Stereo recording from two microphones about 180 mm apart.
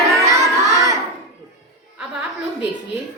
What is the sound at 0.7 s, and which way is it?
Crowd, 15° right (ahead or behind).